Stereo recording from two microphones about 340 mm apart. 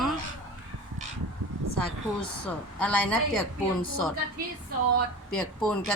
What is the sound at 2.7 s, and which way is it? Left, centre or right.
Speech, centre.